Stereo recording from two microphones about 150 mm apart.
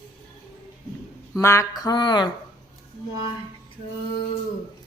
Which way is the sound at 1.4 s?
20° left (ahead or behind).